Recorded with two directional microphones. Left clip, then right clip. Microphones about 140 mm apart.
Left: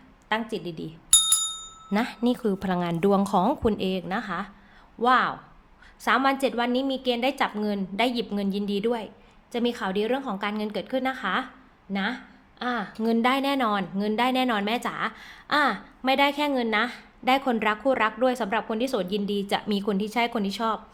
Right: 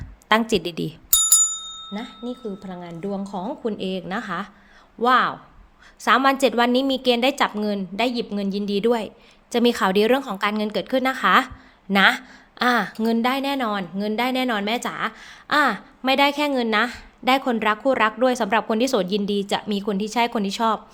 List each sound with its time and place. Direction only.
0.3 s a woman's voice: 45° right (ahead or behind)
1.9 s speech: 35° left (ahead or behind)
3.8 s a woman's voice: centre (ahead or behind); by 11.5 s 40° right (ahead or behind)
11.9 s a sound: 55° right (ahead or behind)
12.6 s a woman's voice: 30° right (ahead or behind)
13.1 s a woman's voice: centre (ahead or behind); by 20.8 s 25° right (ahead or behind)